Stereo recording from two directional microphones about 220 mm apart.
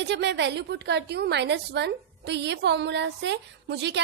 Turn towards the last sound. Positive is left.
turn(degrees=-50)  # may be behind; listen again after turning